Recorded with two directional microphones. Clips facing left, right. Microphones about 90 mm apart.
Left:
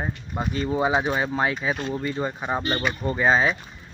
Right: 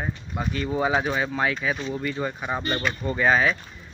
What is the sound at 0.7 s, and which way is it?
Speech, 15° left (ahead or behind).